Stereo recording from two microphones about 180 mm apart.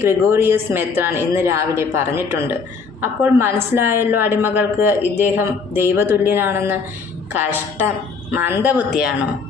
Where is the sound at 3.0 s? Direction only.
10° right (ahead or behind).